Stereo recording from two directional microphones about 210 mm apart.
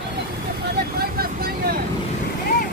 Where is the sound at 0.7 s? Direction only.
45° right (ahead or behind).